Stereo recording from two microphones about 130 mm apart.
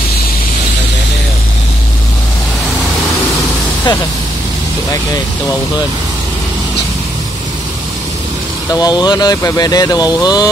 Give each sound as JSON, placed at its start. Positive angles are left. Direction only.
{"t": 8.7, "sound": "speech", "side_deg": 30}